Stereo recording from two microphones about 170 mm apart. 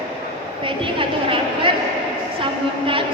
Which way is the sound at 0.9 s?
30° right (ahead or behind).